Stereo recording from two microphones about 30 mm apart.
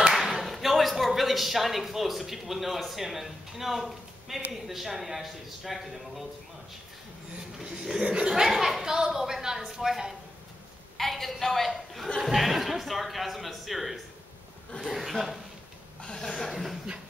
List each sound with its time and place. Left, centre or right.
0.1 s speech: centre
8.0 s speech: right
8.3 s a woman's voice: centre
11.0 s a woman's voice: centre
16.0 s chuckle: left
16.3 s speech: centre